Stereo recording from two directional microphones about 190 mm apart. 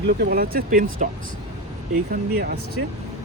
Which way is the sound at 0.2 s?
55° right (ahead or behind).